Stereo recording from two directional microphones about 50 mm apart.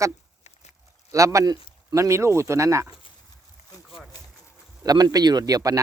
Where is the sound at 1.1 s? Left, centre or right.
Right.